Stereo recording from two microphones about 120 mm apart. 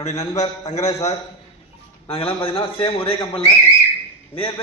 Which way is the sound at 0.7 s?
70° left (ahead or behind).